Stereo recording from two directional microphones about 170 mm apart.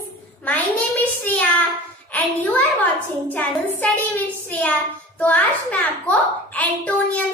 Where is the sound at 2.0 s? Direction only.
10° left (ahead or behind).